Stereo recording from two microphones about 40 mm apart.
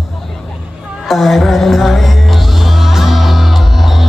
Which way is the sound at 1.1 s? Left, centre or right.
Centre.